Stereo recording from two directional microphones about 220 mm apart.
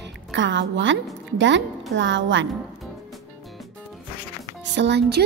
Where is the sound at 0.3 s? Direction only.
55° right (ahead or behind).